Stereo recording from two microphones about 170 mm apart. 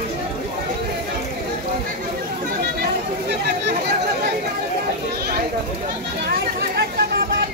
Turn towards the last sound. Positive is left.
turn(degrees=-65)  # may be behind; listen again after turning